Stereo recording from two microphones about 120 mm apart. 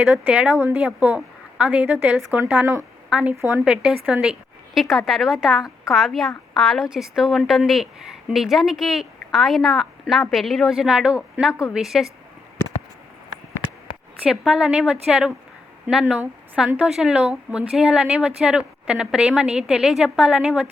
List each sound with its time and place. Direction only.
0.0 s a woman's voice: 15° right (ahead or behind)
3.3 s speech: 20° right (ahead or behind)
3.6 s a woman's voice: 5° right (ahead or behind)
14.3 s a woman's voice: 5° right (ahead or behind)